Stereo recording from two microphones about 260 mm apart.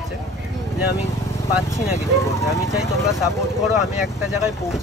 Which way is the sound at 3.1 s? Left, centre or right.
Centre.